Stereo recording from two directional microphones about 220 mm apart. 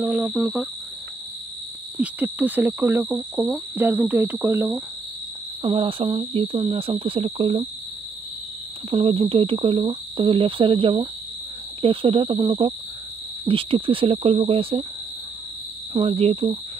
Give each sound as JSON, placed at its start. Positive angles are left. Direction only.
{"t": 0.0, "sound": "speech", "side_deg": -5}
{"t": 2.0, "sound": "speech", "side_deg": -5}
{"t": 5.6, "sound": "speech", "side_deg": -25}
{"t": 8.9, "sound": "speech", "side_deg": -25}
{"t": 15.9, "sound": "speech", "side_deg": -25}